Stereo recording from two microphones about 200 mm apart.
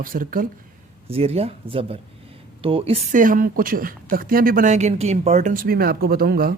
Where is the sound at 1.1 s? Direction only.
30° right (ahead or behind).